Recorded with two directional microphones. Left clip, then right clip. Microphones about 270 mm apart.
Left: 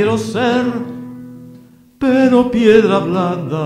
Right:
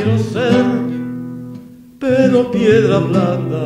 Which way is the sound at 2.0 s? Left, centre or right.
Left.